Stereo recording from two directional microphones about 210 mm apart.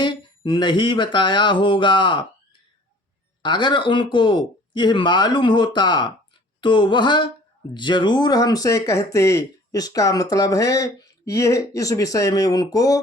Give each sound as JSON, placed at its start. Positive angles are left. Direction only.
{"t": 0.0, "sound": "speech", "side_deg": 20}
{"t": 3.4, "sound": "speech", "side_deg": 20}